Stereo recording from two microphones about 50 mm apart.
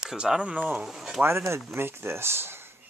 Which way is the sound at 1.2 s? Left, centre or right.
Right.